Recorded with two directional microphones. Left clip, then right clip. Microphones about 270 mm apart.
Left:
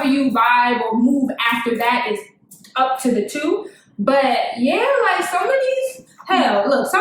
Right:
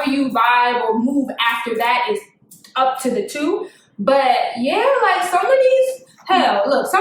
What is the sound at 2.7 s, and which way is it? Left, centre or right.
A woman's voice, centre.